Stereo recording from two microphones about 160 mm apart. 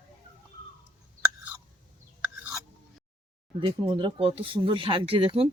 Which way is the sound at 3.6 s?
30° right (ahead or behind).